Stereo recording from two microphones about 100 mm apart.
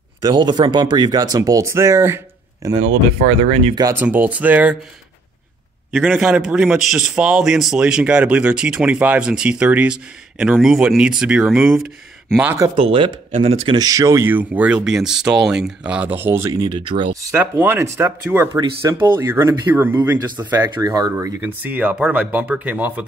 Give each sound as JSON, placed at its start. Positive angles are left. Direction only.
{"t": 0.2, "sound": "speech", "side_deg": -45}
{"t": 3.3, "sound": "speech", "side_deg": -90}
{"t": 3.9, "sound": "a man's voice", "side_deg": -20}
{"t": 5.9, "sound": "a man's voice", "side_deg": -5}
{"t": 12.7, "sound": "speech", "side_deg": -65}
{"t": 13.7, "sound": "a man's voice", "side_deg": -35}
{"t": 16.5, "sound": "speech", "side_deg": -50}
{"t": 17.4, "sound": "speech", "side_deg": -20}
{"t": 20.6, "sound": "speech", "side_deg": -40}
{"t": 21.4, "sound": "a man's voice", "side_deg": -15}